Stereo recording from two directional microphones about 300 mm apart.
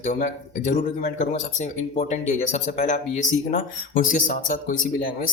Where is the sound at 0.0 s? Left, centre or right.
Left.